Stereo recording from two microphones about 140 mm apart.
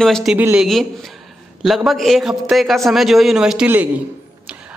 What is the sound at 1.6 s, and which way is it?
A man's voice, centre (ahead or behind).